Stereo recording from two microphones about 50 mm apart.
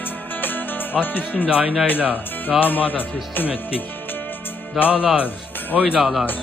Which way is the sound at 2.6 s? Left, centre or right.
Left.